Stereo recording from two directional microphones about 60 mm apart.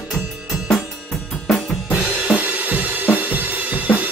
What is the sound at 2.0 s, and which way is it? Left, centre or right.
Drum kit, centre.